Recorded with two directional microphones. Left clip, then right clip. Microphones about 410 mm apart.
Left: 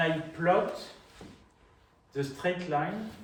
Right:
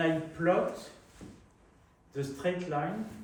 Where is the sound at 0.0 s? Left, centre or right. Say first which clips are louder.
Left 1 dB; left.